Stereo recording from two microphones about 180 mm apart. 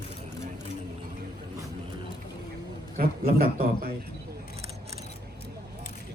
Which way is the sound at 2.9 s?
55° right (ahead or behind).